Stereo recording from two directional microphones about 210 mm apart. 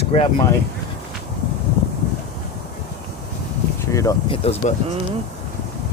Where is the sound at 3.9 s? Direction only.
15° left (ahead or behind).